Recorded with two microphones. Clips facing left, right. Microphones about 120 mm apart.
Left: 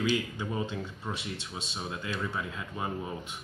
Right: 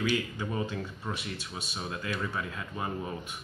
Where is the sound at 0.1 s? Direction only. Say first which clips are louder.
Even; 15° left (ahead or behind).